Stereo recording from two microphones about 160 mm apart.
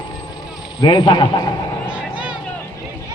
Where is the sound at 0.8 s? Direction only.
30° left (ahead or behind).